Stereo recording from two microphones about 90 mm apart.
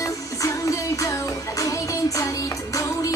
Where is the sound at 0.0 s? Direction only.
35° left (ahead or behind).